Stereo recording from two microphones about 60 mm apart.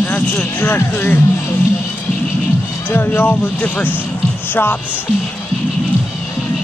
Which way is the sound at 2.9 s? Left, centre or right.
Left.